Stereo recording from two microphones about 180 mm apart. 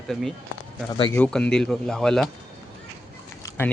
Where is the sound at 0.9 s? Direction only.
25° left (ahead or behind).